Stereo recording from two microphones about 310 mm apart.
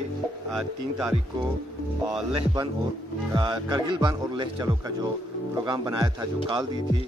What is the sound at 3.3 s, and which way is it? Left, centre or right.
Speech, centre.